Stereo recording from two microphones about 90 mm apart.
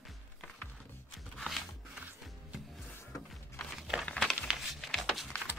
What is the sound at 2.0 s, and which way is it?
Music, 15° right (ahead or behind).